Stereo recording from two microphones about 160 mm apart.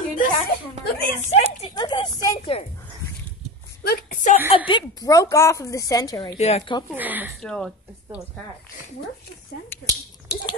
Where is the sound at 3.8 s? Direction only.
70° left (ahead or behind).